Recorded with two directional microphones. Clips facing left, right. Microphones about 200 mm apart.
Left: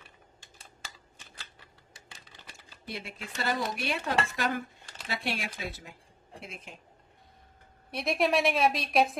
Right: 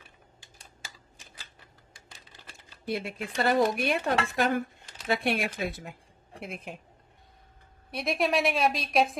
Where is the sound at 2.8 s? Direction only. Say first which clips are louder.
Right 8 dB; 55° right (ahead or behind).